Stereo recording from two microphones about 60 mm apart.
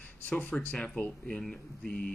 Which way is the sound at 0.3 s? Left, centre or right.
Left.